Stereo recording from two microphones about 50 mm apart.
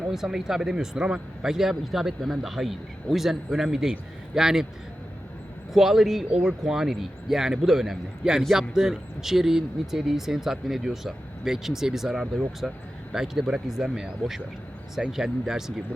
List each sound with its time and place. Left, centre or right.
0.1 s a man's voice: centre
5.7 s a man's voice: centre
12.6 s speech: centre
13.1 s a man's voice: centre